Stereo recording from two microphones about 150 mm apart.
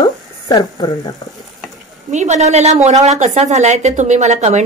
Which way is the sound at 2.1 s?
50° right (ahead or behind).